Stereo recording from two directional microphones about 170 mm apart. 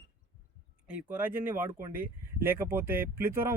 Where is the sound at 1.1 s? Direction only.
10° right (ahead or behind).